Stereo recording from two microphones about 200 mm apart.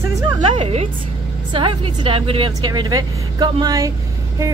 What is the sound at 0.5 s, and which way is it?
A woman's voice, 30° right (ahead or behind).